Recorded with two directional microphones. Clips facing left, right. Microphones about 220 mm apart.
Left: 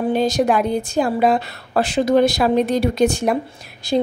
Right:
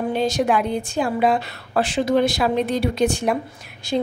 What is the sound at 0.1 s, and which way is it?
A woman's voice, 40° left (ahead or behind).